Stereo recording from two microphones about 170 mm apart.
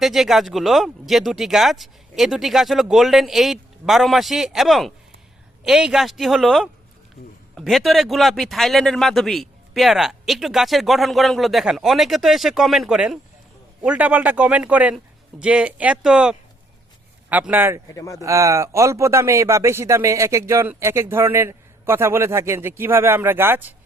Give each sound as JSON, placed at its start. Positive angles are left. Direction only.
{"t": 0.0, "sound": "a man's voice", "side_deg": 0}
{"t": 17.9, "sound": "speech", "side_deg": 20}
{"t": 18.2, "sound": "speech", "side_deg": -20}